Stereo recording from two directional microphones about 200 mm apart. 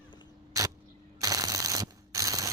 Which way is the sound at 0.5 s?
15° right (ahead or behind).